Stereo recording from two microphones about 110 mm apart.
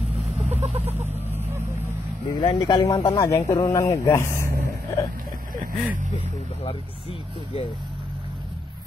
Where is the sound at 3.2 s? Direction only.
25° left (ahead or behind).